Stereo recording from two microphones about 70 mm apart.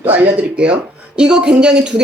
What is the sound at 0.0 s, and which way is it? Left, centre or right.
Speech, right.